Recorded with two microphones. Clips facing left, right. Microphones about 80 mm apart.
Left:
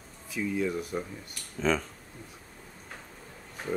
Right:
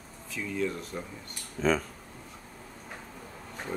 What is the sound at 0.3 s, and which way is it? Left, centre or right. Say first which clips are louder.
Speech: left 2 dB; centre.